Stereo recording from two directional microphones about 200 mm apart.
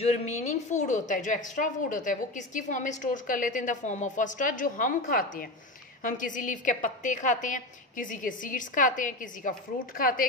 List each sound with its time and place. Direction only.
0.0 s a woman's voice: 35° left (ahead or behind)